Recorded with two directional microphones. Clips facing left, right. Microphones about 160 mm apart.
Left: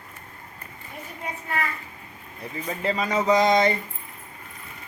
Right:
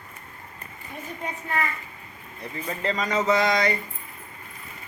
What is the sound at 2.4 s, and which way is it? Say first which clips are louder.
Speech: left 1 dB; 5° left (ahead or behind).